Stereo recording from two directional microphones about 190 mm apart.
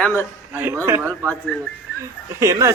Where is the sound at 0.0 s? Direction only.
10° left (ahead or behind).